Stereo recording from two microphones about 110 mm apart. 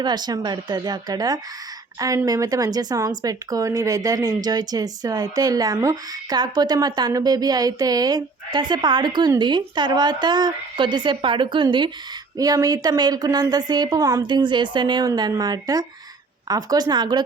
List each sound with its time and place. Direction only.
0.0 s speech: 40° right (ahead or behind)
12.4 s speech: 35° right (ahead or behind)